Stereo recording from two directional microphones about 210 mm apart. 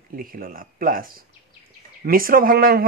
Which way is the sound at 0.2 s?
45° right (ahead or behind).